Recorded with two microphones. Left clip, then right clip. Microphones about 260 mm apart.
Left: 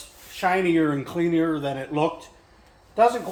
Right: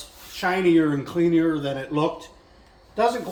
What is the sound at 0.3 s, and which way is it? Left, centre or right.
A man's voice, centre.